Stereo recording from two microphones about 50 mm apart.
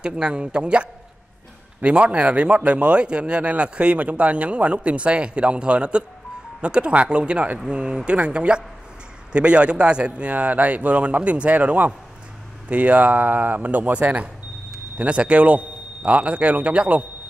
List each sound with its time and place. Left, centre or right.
0.0 s a man's voice: centre